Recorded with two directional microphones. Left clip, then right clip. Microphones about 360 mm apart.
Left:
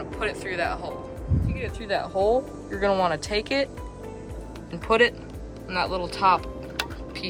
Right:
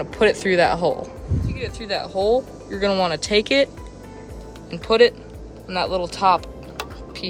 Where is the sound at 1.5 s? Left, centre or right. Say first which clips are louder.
Right 2 dB; centre.